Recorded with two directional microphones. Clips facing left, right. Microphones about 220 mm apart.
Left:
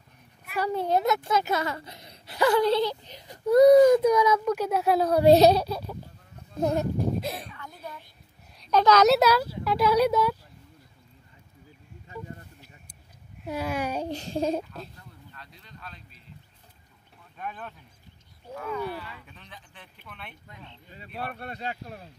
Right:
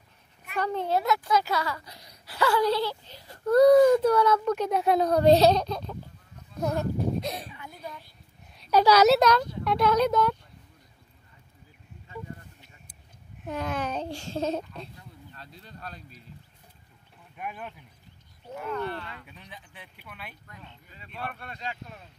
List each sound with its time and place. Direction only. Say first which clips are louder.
0.5 s a child's voice: left 2 dB; 10° left (ahead or behind)
6.6 s speech: left 3 dB; 20° left (ahead or behind)
7.2 s a woman's voice: even; centre (ahead or behind)
9.1 s a child's voice: even; 5° left (ahead or behind)
13.4 s a child's voice: left 1 dB; 10° left (ahead or behind)
15.3 s a sound: right 3 dB; 35° right (ahead or behind)
17.4 s speech: even; 10° right (ahead or behind)
18.7 s speech: even; 5° left (ahead or behind)
19.2 s speech: right 1 dB; 15° right (ahead or behind)
20.9 s speech: left 2 dB; 40° left (ahead or behind)